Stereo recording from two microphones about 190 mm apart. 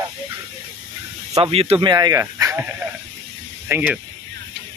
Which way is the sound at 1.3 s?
30° right (ahead or behind).